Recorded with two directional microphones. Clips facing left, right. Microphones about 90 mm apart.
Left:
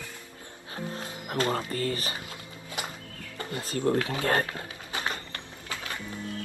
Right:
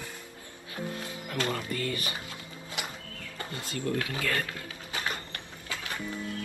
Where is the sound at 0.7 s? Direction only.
35° left (ahead or behind).